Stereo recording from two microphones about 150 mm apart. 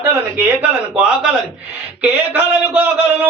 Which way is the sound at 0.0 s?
20° right (ahead or behind).